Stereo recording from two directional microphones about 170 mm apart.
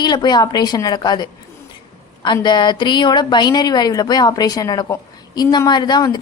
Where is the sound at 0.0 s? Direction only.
25° left (ahead or behind).